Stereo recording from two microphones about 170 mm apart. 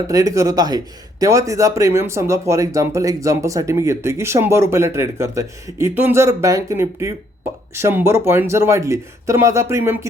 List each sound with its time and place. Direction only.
0.1 s speech: 20° right (ahead or behind)